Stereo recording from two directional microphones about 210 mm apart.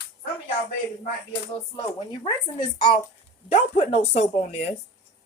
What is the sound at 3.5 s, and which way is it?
Speech, 30° left (ahead or behind).